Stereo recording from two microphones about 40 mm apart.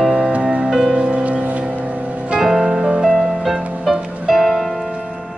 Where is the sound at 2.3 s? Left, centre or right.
Centre.